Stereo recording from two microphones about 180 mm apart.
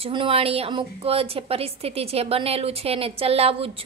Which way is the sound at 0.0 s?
30° right (ahead or behind).